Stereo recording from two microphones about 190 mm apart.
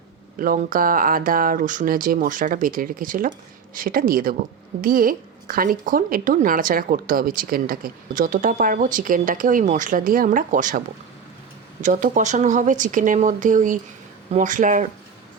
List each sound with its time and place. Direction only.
0.3 s a woman's voice: 50° right (ahead or behind)